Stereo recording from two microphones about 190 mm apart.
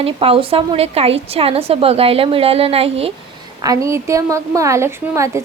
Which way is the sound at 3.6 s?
15° right (ahead or behind).